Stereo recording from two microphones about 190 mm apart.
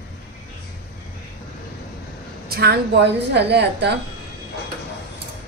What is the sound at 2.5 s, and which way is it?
A woman's voice, 55° right (ahead or behind).